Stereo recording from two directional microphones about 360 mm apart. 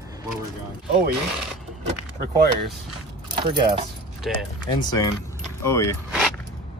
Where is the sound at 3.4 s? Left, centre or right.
Centre.